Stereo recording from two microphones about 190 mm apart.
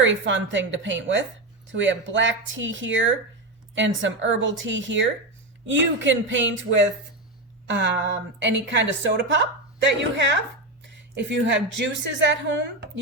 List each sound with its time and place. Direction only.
0.0 s a woman's voice: 80° right
7.7 s a woman's voice: 65° right (ahead or behind)